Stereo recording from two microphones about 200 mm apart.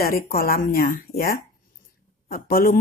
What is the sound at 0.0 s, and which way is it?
A woman's voice, 50° left (ahead or behind).